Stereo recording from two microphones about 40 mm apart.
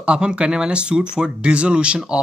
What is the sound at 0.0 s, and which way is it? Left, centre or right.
Speech, right.